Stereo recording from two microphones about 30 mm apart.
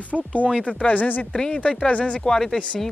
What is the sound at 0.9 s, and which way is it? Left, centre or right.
Speech, left.